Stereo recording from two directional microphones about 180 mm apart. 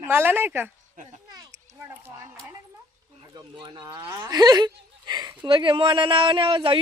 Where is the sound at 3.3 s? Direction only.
25° right (ahead or behind).